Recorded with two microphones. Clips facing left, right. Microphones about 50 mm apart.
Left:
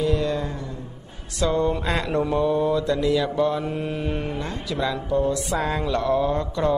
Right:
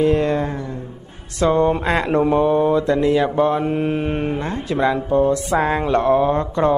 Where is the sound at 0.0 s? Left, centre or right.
Right.